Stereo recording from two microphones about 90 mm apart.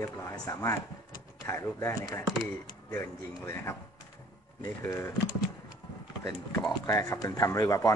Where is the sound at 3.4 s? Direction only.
30° left (ahead or behind).